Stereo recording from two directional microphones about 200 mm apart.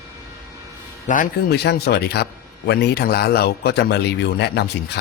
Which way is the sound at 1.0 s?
40° left (ahead or behind).